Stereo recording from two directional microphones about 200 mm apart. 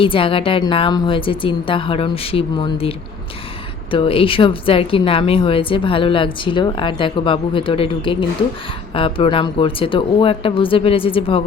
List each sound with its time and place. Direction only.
0.0 s speech: 25° left (ahead or behind)
3.9 s speech: 25° left (ahead or behind)